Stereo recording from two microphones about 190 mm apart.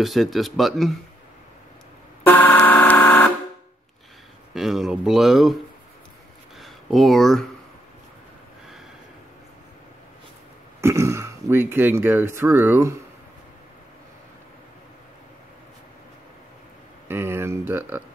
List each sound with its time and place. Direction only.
0.0 s speech: centre (ahead or behind)
2.2 s vehicle horn: 10° left (ahead or behind)
4.6 s speech: centre (ahead or behind)
6.6 s speech: centre (ahead or behind)
10.8 s speech: 15° right (ahead or behind)
17.1 s speech: 10° right (ahead or behind)